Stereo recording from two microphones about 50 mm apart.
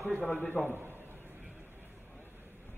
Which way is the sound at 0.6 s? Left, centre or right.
Right.